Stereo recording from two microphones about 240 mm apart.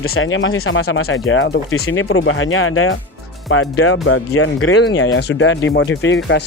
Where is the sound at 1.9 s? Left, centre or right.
Left.